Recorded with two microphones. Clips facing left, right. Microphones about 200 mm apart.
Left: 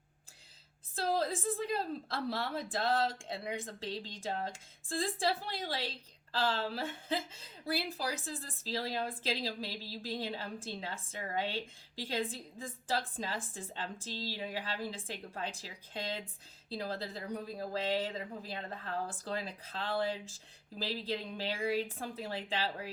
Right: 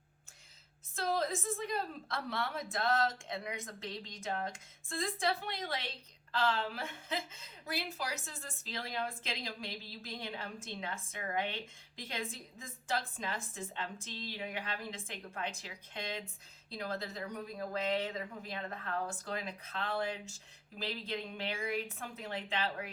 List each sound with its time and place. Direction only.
0.9 s a woman's voice: 30° left (ahead or behind)